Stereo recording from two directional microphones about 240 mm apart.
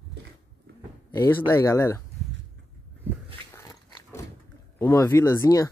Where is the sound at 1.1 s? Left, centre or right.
Centre.